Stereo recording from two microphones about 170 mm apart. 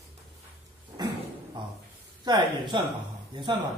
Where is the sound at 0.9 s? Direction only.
25° right (ahead or behind).